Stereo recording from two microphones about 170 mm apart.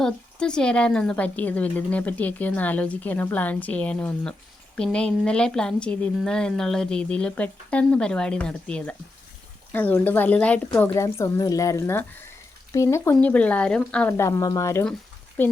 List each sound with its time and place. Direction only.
0.0 s a woman's voice: 5° left (ahead or behind)
14.1 s a woman's voice: 15° left (ahead or behind)